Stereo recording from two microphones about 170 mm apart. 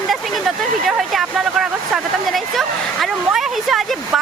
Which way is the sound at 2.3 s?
Centre (ahead or behind).